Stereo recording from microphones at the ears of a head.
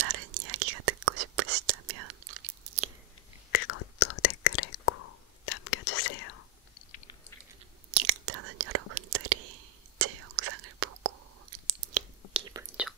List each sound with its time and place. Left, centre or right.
0.0 s whispering: right
3.5 s whispering: left
7.9 s whispering: right